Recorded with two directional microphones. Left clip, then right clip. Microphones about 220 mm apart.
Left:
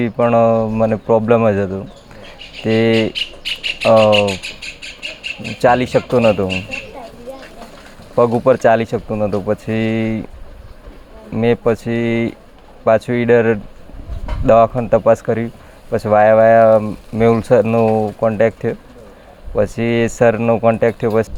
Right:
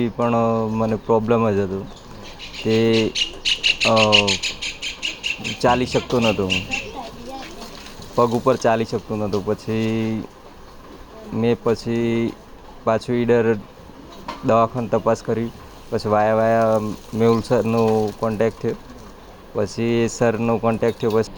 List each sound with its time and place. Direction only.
0.0 s speech: 50° left (ahead or behind)
3.1 s speech: 25° left (ahead or behind)
5.6 s speech: 50° left (ahead or behind)
8.1 s speech: 50° left (ahead or behind)
11.3 s speech: 50° left (ahead or behind)